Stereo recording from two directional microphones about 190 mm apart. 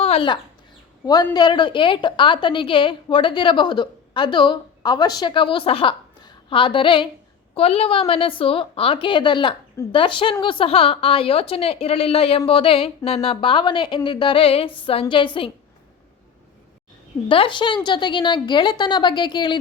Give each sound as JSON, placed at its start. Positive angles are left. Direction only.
{"t": 0.0, "sound": "a sound", "side_deg": 30}
{"t": 1.0, "sound": "a woman's voice", "side_deg": 20}
{"t": 17.2, "sound": "a woman's voice", "side_deg": 25}